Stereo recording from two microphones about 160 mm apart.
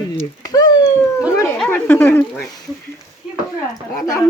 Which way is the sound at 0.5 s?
25° left (ahead or behind).